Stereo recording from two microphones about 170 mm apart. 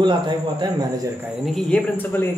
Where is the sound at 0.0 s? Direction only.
25° right (ahead or behind).